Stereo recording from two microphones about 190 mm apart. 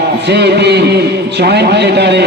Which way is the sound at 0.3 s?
65° right (ahead or behind).